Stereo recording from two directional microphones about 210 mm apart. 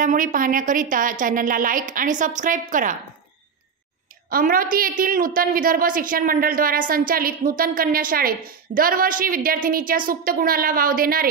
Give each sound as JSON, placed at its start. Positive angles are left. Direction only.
{"t": 0.0, "sound": "a woman's voice", "side_deg": -40}
{"t": 4.3, "sound": "a woman's voice", "side_deg": -45}